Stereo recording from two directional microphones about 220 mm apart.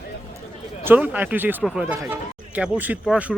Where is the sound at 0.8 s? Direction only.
10° right (ahead or behind).